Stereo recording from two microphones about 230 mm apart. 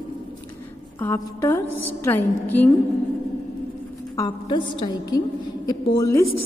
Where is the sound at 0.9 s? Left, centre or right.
Centre.